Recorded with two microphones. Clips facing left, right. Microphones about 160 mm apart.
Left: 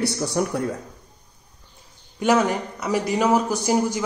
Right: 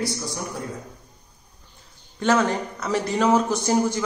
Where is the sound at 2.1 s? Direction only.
15° left (ahead or behind).